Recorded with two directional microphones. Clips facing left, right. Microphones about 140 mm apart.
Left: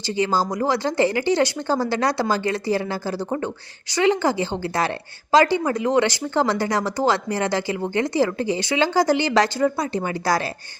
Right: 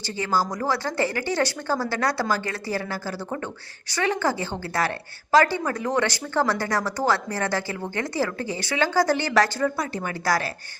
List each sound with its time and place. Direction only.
0.0 s a woman's voice: 20° left (ahead or behind)